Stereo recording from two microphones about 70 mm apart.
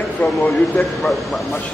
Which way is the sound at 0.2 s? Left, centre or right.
Centre.